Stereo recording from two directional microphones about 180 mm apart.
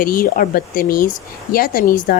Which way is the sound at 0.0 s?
55° left (ahead or behind).